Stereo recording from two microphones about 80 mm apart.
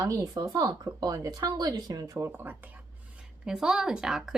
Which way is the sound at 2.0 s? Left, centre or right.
Right.